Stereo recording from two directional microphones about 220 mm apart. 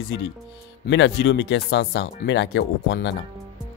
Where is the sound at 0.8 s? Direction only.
55° left (ahead or behind).